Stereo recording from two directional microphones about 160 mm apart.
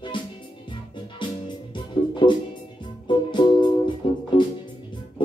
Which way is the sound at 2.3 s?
30° left (ahead or behind).